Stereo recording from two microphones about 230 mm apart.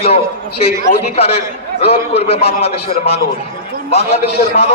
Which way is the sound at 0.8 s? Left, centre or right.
Left.